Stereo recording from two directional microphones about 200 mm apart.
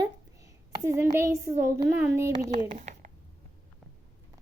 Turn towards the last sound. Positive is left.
turn(degrees=-40)  # may be behind; listen again after turning